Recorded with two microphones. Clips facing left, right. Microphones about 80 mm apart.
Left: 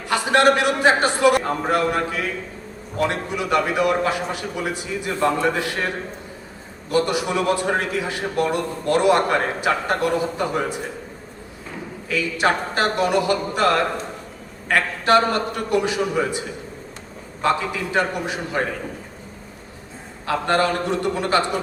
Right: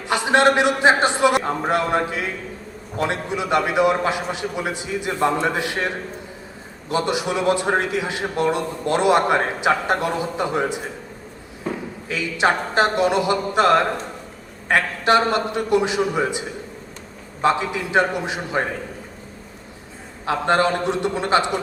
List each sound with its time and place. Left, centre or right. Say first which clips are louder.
0.1 s a man's voice: even; right
6.9 s a man's voice: left 1 dB; right
12.0 s a man's voice: even; right
17.4 s a man's voice: right 1 dB; right
20.2 s a man's voice: right 1 dB; right